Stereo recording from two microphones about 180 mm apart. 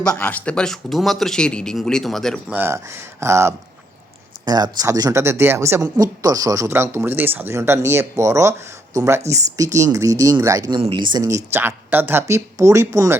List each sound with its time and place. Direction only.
0.0 s speech: 5° left (ahead or behind)
2.6 s speech: 15° right (ahead or behind)
10.8 s speech: 30° right (ahead or behind)